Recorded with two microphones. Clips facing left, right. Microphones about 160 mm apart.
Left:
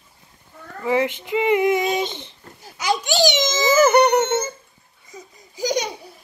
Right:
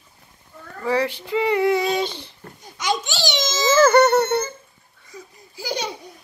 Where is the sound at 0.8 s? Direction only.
20° left (ahead or behind).